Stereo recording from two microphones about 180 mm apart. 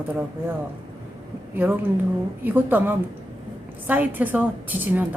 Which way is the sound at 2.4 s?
10° right (ahead or behind).